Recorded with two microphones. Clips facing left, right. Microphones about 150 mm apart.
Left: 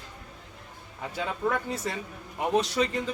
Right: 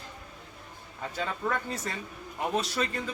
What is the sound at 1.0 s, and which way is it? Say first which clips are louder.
A man's voice: left 2 dB; 10° left (ahead or behind).